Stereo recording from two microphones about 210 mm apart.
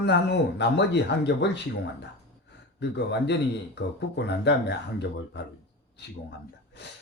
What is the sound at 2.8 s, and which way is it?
Speech, 55° left (ahead or behind).